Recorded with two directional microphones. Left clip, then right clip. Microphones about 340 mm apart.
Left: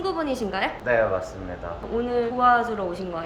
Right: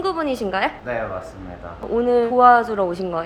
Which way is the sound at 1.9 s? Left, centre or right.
Centre.